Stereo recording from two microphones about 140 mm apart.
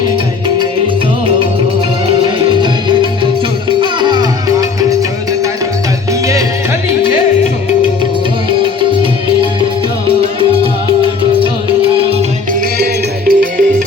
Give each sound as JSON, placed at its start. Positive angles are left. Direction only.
{"t": 2.2, "sound": "music", "side_deg": -35}
{"t": 13.2, "sound": "music", "side_deg": -85}